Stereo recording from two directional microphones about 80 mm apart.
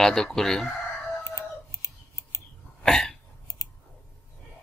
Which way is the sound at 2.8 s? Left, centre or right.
Centre.